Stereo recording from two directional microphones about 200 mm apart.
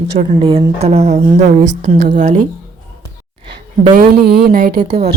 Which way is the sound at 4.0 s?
50° right (ahead or behind).